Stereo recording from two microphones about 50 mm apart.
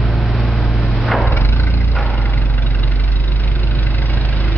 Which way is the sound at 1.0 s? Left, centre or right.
Centre.